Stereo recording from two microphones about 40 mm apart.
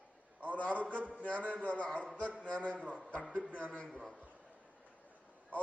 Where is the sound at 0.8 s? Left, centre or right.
Right.